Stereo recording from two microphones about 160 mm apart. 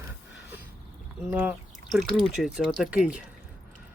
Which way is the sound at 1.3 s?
10° right (ahead or behind).